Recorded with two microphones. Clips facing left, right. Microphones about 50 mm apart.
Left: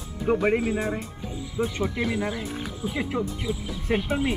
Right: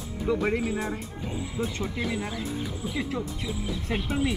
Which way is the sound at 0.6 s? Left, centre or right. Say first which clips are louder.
Left 3 dB; centre.